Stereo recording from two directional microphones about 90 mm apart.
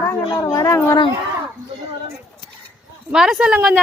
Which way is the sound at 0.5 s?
30° left (ahead or behind).